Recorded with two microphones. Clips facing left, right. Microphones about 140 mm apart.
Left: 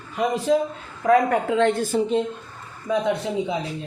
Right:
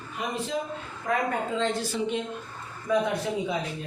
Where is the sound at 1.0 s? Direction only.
75° left (ahead or behind); by 2.0 s 50° left (ahead or behind).